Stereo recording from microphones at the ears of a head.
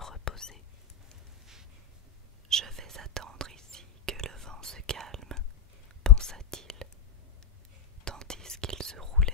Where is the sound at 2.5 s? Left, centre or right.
Right.